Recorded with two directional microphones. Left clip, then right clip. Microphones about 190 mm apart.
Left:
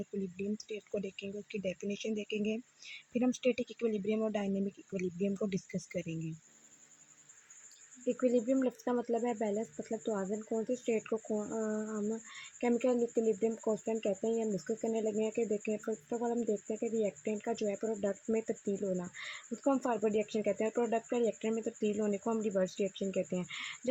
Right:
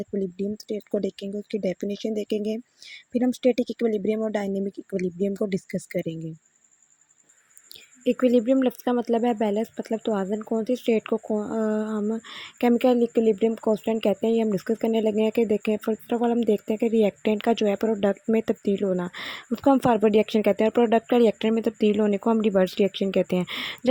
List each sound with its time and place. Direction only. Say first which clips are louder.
0.0 s speech: right 11 dB; 30° right (ahead or behind)
8.0 s speech: right 10 dB; 45° right (ahead or behind)